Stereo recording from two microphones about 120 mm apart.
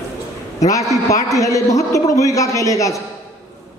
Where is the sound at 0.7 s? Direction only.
25° left (ahead or behind).